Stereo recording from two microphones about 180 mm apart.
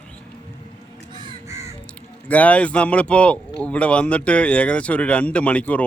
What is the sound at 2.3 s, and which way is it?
Speech, 10° left (ahead or behind).